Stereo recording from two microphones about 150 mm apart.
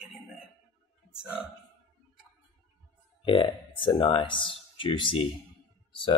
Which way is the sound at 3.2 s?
30° left (ahead or behind).